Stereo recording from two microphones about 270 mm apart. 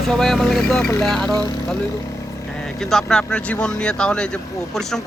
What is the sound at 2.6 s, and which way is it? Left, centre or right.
Speech, centre.